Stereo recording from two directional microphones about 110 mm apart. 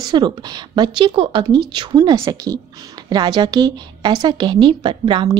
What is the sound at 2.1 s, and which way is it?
A woman's voice, 30° right (ahead or behind).